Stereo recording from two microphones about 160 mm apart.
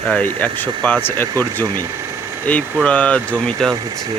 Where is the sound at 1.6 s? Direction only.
20° right (ahead or behind).